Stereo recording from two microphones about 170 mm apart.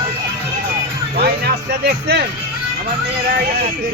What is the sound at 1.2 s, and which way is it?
Speech, 70° right (ahead or behind).